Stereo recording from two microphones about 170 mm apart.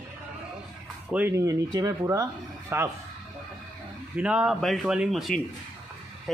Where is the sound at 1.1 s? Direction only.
10° right (ahead or behind).